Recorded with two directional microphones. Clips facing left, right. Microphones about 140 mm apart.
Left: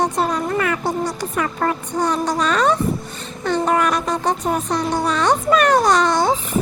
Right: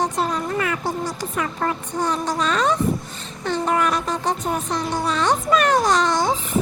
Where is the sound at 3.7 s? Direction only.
65° left (ahead or behind).